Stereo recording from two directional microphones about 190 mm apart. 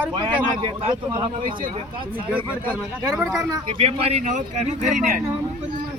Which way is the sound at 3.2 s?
10° right (ahead or behind).